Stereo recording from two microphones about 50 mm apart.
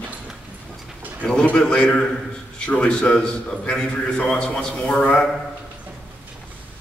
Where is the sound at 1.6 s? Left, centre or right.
Centre.